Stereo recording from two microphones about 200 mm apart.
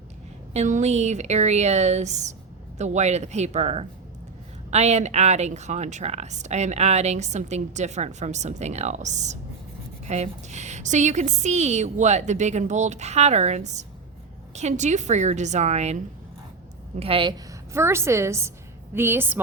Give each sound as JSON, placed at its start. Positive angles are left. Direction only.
{"t": 0.5, "sound": "speech", "side_deg": -35}
{"t": 17.0, "sound": "a woman's voice", "side_deg": -25}
{"t": 17.7, "sound": "a woman's voice", "side_deg": -15}